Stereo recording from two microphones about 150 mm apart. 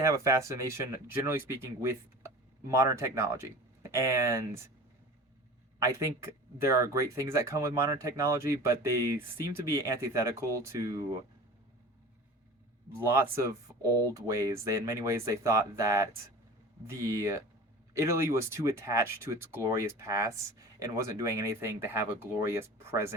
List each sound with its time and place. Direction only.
0.0 s speech: 20° right (ahead or behind)
5.8 s speech: 20° right (ahead or behind)
13.1 s speech: 20° right (ahead or behind)